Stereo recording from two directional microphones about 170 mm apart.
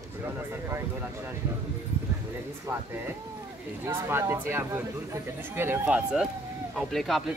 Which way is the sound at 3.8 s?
15° right (ahead or behind).